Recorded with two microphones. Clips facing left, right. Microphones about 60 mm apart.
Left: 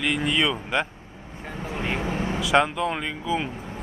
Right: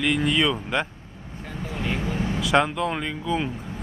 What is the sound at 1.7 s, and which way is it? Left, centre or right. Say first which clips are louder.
Vehicle: left 1 dB; left.